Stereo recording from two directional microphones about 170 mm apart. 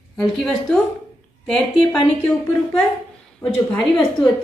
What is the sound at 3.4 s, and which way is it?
Speech, 20° left (ahead or behind).